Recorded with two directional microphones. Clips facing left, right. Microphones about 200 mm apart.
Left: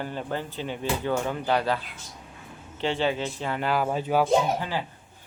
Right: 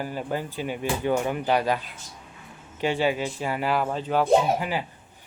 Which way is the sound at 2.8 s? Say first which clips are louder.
Right 2 dB; 10° right (ahead or behind).